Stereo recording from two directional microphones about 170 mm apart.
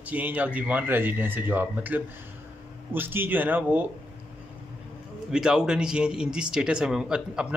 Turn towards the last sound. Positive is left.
turn(degrees=-5)  # may be behind; listen again after turning